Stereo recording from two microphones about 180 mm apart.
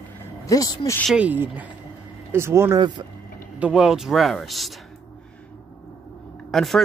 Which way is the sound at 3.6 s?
5° right (ahead or behind).